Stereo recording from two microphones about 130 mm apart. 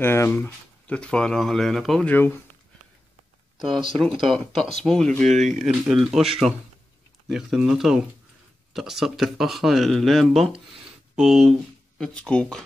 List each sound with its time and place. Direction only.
0.0 s speech: 15° left (ahead or behind); by 2.0 s centre (ahead or behind)
2.0 s speech: 15° left (ahead or behind)
3.5 s speech: centre (ahead or behind)
5.2 s speech: 65° right (ahead or behind)
5.7 s speech: 5° right (ahead or behind)